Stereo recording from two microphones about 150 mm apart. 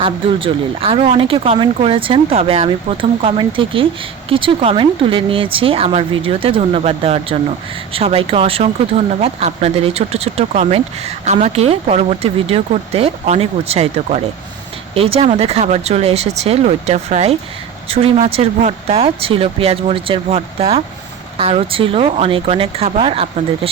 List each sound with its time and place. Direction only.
0.0 s speech: 35° right (ahead or behind)